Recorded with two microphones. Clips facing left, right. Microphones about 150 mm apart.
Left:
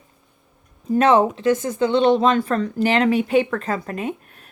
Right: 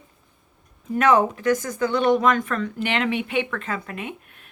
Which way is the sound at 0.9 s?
30° left (ahead or behind).